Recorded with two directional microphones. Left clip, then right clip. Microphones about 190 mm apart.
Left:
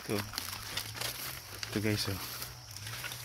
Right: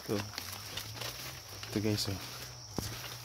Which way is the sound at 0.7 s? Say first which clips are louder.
Left 4 dB; 55° left (ahead or behind).